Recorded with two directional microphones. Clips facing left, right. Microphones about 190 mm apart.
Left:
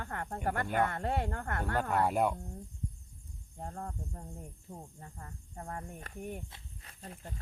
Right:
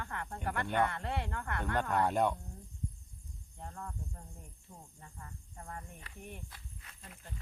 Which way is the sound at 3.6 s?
40° left (ahead or behind).